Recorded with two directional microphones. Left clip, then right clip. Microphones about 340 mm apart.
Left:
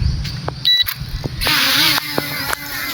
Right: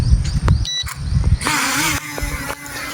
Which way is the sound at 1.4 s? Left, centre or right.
Centre.